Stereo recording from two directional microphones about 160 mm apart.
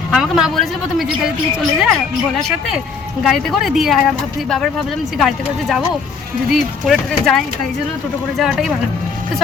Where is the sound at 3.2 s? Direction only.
Centre (ahead or behind).